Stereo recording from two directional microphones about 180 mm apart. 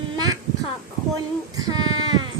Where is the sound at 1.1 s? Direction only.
20° right (ahead or behind).